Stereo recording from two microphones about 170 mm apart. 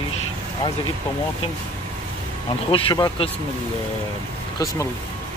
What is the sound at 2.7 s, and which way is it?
Speech, 30° left (ahead or behind).